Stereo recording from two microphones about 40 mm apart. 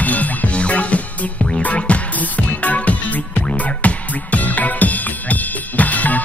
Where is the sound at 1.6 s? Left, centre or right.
Left.